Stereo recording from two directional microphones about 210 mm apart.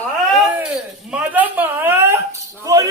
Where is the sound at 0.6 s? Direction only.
5° right (ahead or behind).